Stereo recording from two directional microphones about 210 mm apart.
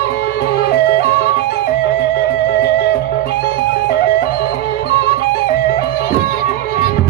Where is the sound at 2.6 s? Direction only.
50° left (ahead or behind).